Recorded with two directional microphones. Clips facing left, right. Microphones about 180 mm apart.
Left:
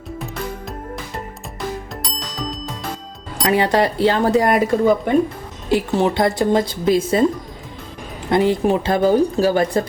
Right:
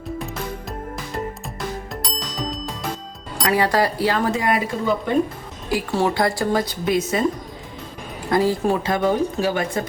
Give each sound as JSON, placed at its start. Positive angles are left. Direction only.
{"t": 2.0, "sound": "ding", "side_deg": 0}
{"t": 3.4, "sound": "speech", "side_deg": 25}
{"t": 5.6, "sound": "speech", "side_deg": 20}
{"t": 8.3, "sound": "speech", "side_deg": 20}